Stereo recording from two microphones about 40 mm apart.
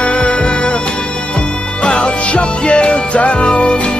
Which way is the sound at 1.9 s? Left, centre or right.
Left.